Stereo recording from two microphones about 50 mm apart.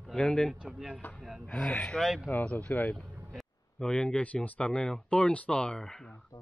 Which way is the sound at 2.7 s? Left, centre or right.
Left.